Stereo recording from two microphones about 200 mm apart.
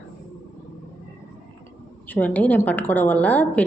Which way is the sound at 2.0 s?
10° left (ahead or behind).